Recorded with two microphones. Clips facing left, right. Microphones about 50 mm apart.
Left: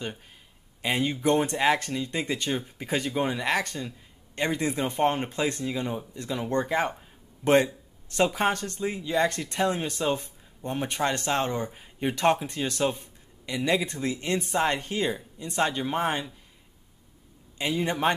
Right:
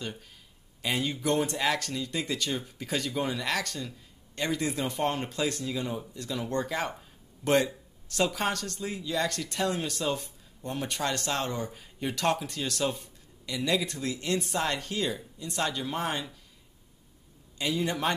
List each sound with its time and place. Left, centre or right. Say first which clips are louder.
0.8 s speech: left 4 dB; left
17.6 s speech: left 2 dB; left